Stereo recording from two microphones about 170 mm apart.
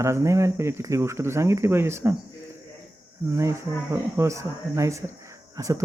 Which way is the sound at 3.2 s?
15° right (ahead or behind).